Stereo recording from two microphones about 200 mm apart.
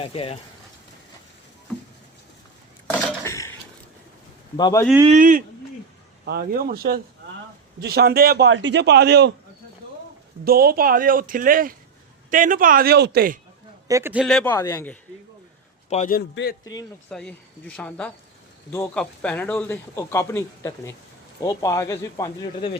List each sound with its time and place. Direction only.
0.0 s speech: 30° left (ahead or behind)
3.2 s a sound: 15° left (ahead or behind)
4.5 s speech: 20° left (ahead or behind)
5.0 s speech: 40° right (ahead or behind)
8.4 s a man's voice: 65° right (ahead or behind)
10.4 s speech: 50° right (ahead or behind)
13.8 s a man's voice: 15° right (ahead or behind); by 14.9 s 10° left (ahead or behind)
15.9 s a man's voice: 40° left (ahead or behind)
16.3 s a man's voice: 55° left (ahead or behind)
17.1 s a man's voice: 5° left (ahead or behind)